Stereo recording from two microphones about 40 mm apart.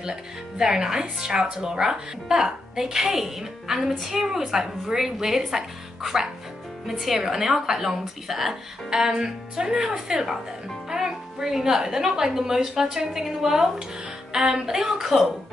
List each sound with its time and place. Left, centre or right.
0.0 s a woman's voice: centre